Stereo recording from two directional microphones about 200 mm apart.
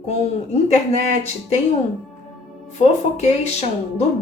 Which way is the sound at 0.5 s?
35° left (ahead or behind).